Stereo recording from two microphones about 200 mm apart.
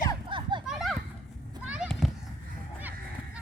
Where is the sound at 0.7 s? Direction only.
Centre (ahead or behind).